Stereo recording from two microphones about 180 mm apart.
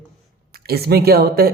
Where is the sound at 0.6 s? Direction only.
60° right (ahead or behind).